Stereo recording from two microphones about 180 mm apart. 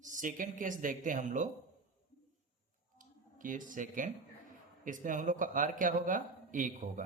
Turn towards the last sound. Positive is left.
turn(degrees=-45)  # may be behind; listen again after turning